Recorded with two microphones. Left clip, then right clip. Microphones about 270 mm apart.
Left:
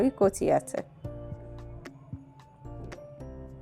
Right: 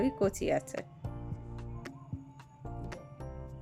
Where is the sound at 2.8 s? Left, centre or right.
Centre.